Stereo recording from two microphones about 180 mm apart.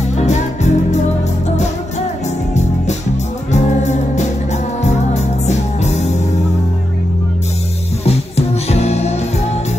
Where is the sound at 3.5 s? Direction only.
40° left (ahead or behind).